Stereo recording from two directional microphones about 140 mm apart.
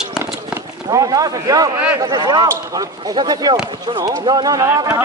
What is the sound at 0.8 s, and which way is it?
Speech, 25° right (ahead or behind).